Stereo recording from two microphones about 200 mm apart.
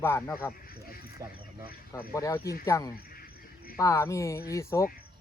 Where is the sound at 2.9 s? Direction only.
50° left (ahead or behind).